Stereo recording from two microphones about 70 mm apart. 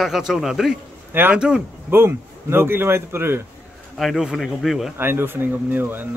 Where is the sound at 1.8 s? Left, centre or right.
Right.